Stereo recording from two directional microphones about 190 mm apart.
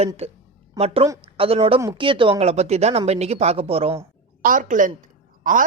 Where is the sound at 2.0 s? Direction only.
25° right (ahead or behind).